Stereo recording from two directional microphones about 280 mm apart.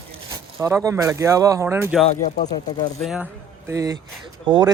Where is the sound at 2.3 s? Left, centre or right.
Left.